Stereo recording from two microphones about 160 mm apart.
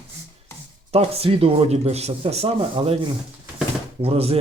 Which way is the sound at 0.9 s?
35° right (ahead or behind).